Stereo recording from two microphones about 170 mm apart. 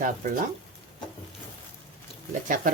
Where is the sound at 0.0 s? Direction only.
50° right (ahead or behind).